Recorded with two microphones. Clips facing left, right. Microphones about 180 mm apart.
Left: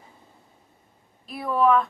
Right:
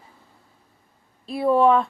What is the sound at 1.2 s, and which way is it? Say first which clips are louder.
Speech: right 4 dB; 30° right (ahead or behind).